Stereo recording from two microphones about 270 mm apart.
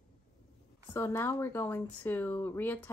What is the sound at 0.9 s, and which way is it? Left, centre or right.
Speech, centre.